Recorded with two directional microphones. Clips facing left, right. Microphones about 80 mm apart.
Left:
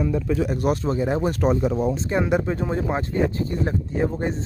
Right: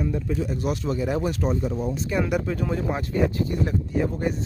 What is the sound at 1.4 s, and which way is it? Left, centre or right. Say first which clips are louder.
Speech: left 5 dB; left.